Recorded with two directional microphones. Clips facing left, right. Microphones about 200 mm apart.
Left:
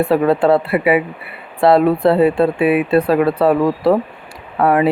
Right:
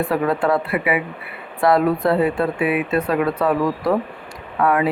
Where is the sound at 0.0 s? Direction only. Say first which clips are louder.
Left 6 dB; 30° left (ahead or behind).